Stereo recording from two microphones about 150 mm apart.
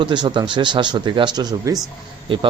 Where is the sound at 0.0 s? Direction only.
30° right (ahead or behind).